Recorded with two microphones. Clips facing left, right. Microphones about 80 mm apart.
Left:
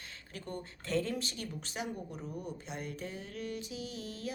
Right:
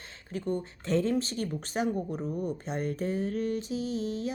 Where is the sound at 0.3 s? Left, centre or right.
Right.